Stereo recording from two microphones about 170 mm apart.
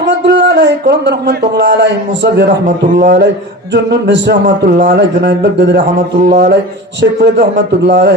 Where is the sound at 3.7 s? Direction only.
90° right.